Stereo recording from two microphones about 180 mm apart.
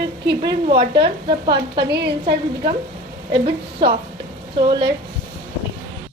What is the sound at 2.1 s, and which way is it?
A woman's voice, 30° right (ahead or behind).